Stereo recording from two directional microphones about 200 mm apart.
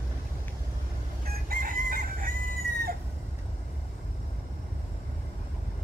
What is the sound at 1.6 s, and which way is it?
Chicken, 45° right (ahead or behind).